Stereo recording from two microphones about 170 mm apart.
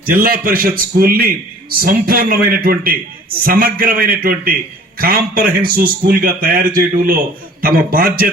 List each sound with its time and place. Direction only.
0.0 s a man's voice: 60° right (ahead or behind)